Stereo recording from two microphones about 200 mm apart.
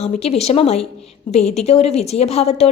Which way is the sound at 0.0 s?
30° left (ahead or behind).